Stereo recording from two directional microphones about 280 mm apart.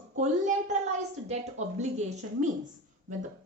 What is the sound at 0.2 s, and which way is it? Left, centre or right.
Speech, right.